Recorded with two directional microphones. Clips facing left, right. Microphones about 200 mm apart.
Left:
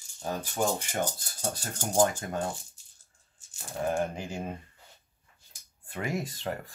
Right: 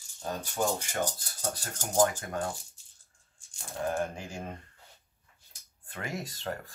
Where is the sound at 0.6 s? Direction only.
15° left (ahead or behind).